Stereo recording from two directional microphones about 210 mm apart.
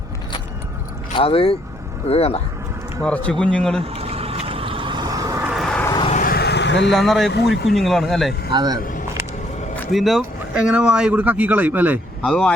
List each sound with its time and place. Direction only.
1.1 s speech: 25° left (ahead or behind)
3.0 s speech: 5° left (ahead or behind)
3.8 s vehicle: 30° right (ahead or behind)
5.5 s vehicle: centre (ahead or behind)
5.9 s vehicle: 25° left (ahead or behind)
6.1 s vehicle: 45° left (ahead or behind)
6.9 s speech: centre (ahead or behind)
8.5 s speech: 20° right (ahead or behind)
9.7 s speech: 5° left (ahead or behind)
12.2 s speech: 5° left (ahead or behind)